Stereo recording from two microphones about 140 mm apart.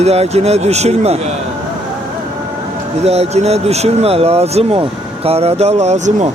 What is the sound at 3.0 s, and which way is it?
Speech, 50° right (ahead or behind).